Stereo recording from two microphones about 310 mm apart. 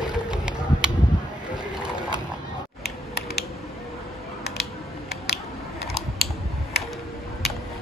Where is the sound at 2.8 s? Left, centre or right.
Left.